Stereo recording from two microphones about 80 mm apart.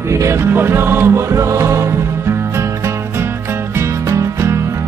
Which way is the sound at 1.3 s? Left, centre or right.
Right.